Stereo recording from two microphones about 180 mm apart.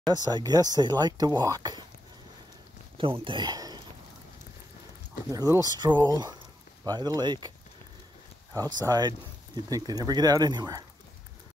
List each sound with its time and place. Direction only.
0.0 s speech: 20° right (ahead or behind)
3.0 s speech: 30° right (ahead or behind)
5.3 s speech: 20° right (ahead or behind)
8.5 s speech: 20° right (ahead or behind)